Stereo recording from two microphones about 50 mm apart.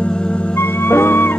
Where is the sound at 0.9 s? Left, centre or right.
Left.